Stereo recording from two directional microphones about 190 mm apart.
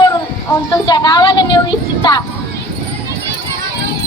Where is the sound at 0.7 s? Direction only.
20° left (ahead or behind).